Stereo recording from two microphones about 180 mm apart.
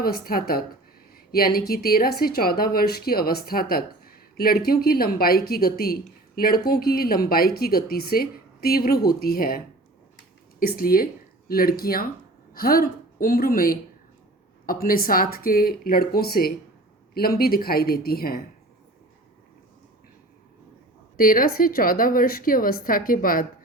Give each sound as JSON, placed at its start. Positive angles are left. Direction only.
{"t": 0.0, "sound": "a woman's voice", "side_deg": 55}
{"t": 10.8, "sound": "a woman's voice", "side_deg": 55}
{"t": 21.2, "sound": "a woman's voice", "side_deg": 50}